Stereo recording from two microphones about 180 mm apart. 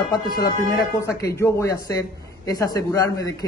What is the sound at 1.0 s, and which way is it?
A man's voice, 15° left (ahead or behind).